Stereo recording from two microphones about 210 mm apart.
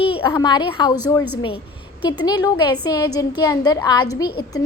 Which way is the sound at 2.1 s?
20° left (ahead or behind).